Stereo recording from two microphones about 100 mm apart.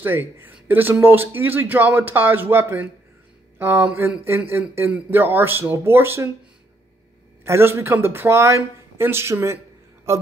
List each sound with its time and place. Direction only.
0.0 s speech: 20° right (ahead or behind)
7.4 s speech: 25° right (ahead or behind)